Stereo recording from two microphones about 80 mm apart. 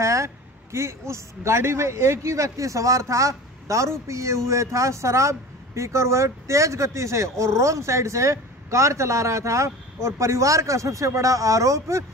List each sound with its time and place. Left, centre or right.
0.0 s speech: right